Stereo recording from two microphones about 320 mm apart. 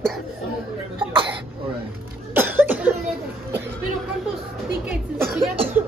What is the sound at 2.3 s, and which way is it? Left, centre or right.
Cough, centre.